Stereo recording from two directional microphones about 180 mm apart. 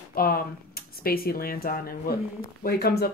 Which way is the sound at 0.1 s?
55° left (ahead or behind).